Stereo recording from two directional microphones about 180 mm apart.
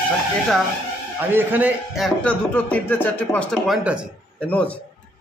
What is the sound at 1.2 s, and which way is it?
Speech, 10° right (ahead or behind).